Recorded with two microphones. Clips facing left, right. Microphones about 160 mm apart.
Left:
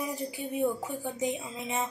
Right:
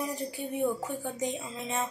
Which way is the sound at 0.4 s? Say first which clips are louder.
Even; 15° left (ahead or behind).